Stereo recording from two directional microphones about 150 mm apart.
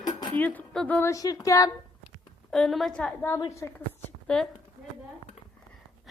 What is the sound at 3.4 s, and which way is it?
Speech, 20° left (ahead or behind).